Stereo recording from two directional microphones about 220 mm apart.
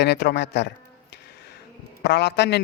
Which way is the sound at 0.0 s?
50° left (ahead or behind).